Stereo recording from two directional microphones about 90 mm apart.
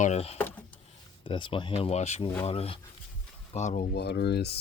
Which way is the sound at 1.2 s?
70° left (ahead or behind).